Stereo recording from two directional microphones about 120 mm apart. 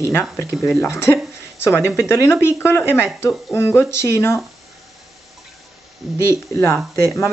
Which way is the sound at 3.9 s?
20° left (ahead or behind).